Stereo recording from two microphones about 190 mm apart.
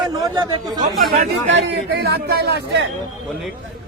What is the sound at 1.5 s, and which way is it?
Speech, 55° right (ahead or behind).